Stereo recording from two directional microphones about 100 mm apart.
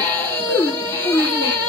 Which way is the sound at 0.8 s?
20° left (ahead or behind).